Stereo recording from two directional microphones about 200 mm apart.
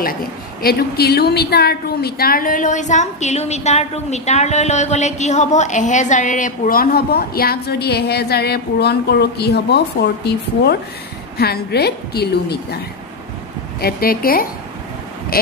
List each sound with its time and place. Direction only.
0.6 s a woman's voice: 50° left (ahead or behind)
13.7 s a woman's voice: 50° left (ahead or behind)